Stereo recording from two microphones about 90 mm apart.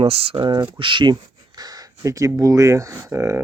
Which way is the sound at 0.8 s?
65° right (ahead or behind).